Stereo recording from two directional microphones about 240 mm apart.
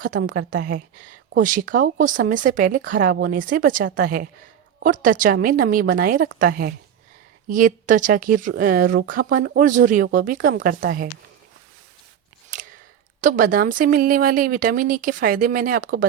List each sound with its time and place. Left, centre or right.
0.0 s speech: right
12.5 s a sound: right
13.2 s speech: right